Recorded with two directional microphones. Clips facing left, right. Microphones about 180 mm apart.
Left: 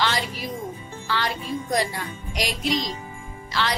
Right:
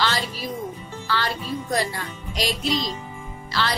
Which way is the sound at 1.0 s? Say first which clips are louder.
Right 1 dB; 15° left (ahead or behind).